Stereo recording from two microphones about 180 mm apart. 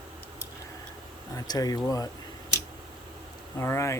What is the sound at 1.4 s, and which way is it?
Speech, 20° left (ahead or behind).